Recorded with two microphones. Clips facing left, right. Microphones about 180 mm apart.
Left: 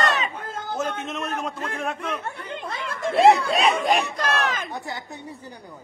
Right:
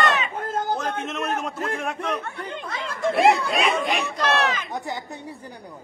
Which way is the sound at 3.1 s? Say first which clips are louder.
Left 3 dB; 25° left (ahead or behind).